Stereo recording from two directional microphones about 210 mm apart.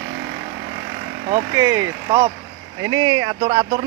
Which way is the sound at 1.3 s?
15° right (ahead or behind).